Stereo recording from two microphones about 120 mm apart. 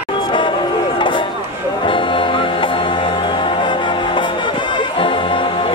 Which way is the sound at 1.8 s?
45° left (ahead or behind).